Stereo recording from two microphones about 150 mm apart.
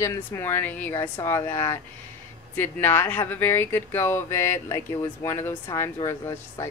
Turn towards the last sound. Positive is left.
turn(degrees=20)  # may be behind; listen again after turning